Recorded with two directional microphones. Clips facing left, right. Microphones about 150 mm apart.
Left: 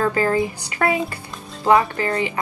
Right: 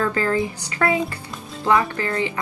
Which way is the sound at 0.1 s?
20° left (ahead or behind).